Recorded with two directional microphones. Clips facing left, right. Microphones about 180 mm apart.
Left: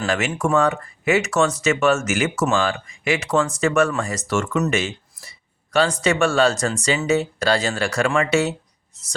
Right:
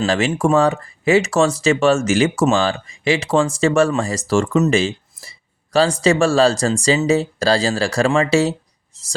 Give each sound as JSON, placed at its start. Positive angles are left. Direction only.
{"t": 0.0, "sound": "speech", "side_deg": -30}